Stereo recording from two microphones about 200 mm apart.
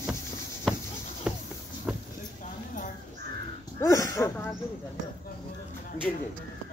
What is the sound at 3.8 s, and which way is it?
Speech, 15° left (ahead or behind).